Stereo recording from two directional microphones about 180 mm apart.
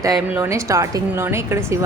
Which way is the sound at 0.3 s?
15° right (ahead or behind).